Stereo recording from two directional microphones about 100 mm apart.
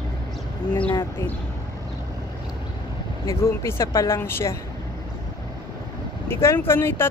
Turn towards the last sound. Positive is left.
turn(degrees=25)  # may be behind; listen again after turning